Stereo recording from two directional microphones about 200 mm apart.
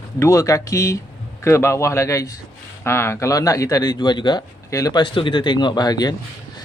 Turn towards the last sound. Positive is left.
turn(degrees=20)  # may be behind; listen again after turning